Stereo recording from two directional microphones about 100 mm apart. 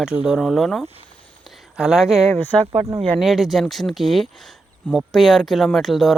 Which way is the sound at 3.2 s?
Centre (ahead or behind).